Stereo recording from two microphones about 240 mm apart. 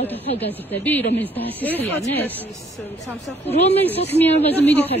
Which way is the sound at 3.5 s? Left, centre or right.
Left.